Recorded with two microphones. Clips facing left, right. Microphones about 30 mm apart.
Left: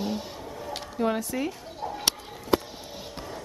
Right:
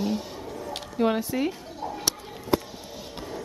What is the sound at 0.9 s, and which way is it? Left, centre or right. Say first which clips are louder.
Speech: right 3 dB; centre.